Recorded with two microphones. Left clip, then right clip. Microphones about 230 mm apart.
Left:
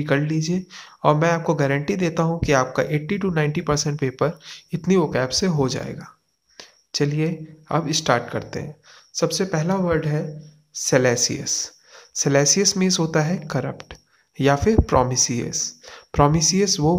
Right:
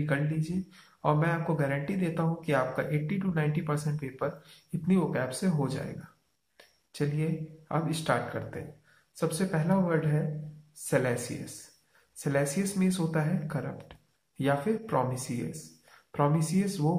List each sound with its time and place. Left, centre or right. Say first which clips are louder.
0.0 s speech: left 10 dB; left
6.9 s speech: left 10 dB; left
12.2 s speech: left 12 dB; left